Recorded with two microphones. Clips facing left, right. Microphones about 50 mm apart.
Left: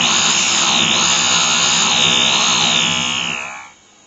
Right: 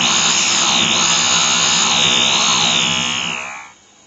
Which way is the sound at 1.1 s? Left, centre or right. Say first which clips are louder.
Even; left.